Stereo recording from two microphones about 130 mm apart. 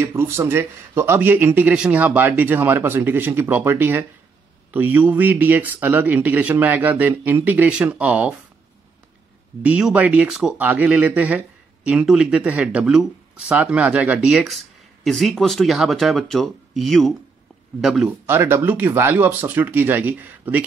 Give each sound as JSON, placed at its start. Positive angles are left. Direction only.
{"t": 0.0, "sound": "speech", "side_deg": -20}
{"t": 9.6, "sound": "speech", "side_deg": -10}
{"t": 18.2, "sound": "speech", "side_deg": -20}